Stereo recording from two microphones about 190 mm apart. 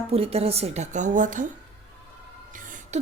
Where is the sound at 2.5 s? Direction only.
45° right (ahead or behind).